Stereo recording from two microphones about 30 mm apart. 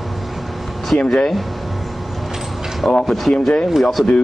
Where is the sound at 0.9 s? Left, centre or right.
Left.